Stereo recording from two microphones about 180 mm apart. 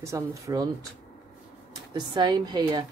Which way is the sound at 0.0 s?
15° right (ahead or behind).